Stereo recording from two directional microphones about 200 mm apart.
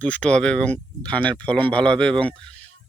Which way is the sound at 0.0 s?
5° left (ahead or behind).